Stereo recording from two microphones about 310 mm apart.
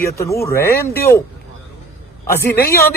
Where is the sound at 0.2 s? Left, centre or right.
Centre.